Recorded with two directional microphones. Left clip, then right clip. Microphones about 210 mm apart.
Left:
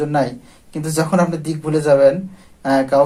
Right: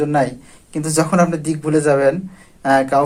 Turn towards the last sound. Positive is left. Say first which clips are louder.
# even
turn(degrees=-20)  # may be behind; listen again after turning